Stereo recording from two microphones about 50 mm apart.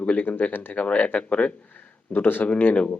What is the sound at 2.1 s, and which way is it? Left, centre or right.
Speech, left.